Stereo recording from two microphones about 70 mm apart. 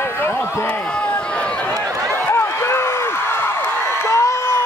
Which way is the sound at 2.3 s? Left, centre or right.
Left.